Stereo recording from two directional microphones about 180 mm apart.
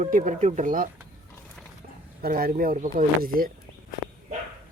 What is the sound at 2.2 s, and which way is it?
Speech, 55° right (ahead or behind).